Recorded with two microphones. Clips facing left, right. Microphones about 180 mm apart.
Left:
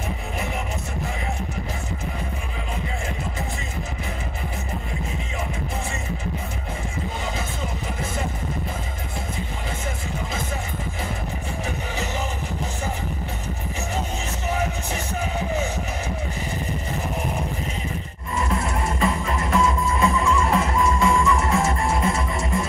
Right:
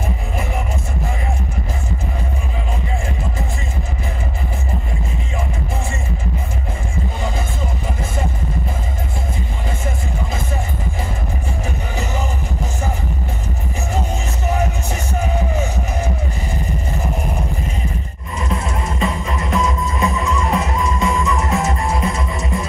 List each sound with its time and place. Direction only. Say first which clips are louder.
18.3 s music: right 1 dB; 20° right (ahead or behind)